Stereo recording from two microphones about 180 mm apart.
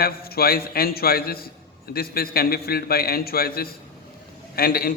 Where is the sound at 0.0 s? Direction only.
60° left (ahead or behind).